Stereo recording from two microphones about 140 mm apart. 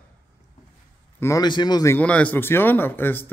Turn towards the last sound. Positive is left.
turn(degrees=15)  # may be behind; listen again after turning